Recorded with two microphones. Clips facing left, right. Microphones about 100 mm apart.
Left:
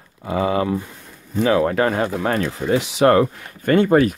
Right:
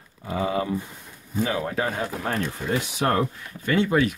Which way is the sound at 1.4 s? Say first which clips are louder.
Left 9 dB; 80° left.